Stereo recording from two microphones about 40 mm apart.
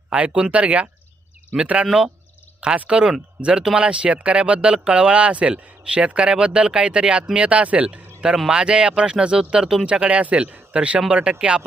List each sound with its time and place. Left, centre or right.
0.1 s speech: right
2.9 s speech: right
9.8 s speech: right